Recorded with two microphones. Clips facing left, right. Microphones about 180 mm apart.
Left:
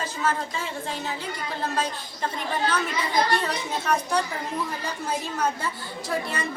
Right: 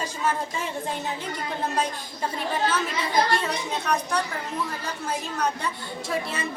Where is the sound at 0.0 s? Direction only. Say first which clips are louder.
Even; 15° right (ahead or behind).